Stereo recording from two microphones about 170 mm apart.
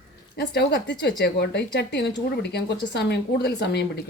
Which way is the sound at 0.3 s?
85° left.